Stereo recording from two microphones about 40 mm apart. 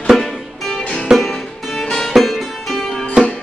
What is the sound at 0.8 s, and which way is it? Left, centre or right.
Music, left.